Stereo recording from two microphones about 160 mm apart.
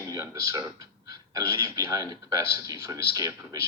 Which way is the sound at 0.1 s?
20° right (ahead or behind).